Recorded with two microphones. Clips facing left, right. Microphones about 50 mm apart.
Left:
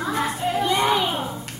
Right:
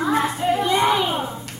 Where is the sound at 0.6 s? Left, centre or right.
Centre.